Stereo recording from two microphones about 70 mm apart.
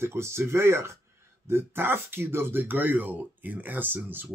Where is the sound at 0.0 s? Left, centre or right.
Right.